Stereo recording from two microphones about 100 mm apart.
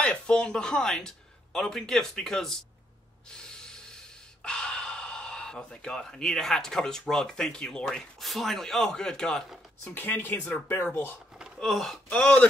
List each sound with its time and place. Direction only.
0.0 s speech: 10° left (ahead or behind)
3.4 s snort: 5° left (ahead or behind)
4.4 s speech: 10° left (ahead or behind)
9.9 s speech: 20° left (ahead or behind)
11.6 s speech: centre (ahead or behind)
12.1 s speech: 10° left (ahead or behind)